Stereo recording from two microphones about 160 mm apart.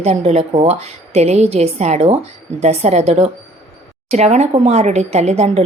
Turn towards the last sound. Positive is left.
turn(degrees=-45)  # may be behind; listen again after turning